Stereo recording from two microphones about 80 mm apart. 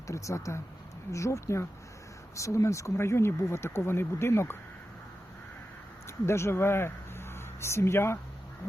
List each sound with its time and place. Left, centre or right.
0.1 s speech: left
6.1 s speech: left